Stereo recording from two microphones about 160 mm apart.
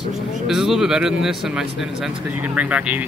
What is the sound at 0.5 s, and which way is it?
Speech, 5° right (ahead or behind).